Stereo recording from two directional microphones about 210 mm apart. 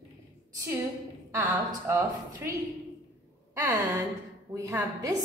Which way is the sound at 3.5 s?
10° right (ahead or behind).